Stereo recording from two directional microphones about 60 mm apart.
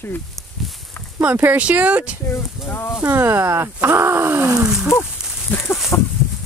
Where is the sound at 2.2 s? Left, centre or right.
Left.